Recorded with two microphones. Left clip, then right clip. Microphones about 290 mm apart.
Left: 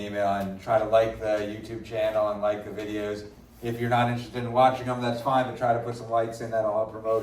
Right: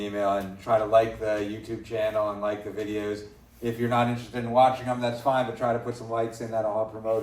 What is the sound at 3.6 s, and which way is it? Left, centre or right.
A man's voice, right.